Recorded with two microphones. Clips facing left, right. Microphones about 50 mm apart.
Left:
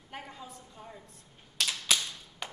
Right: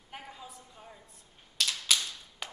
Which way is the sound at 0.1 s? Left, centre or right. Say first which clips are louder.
Left 2 dB; centre.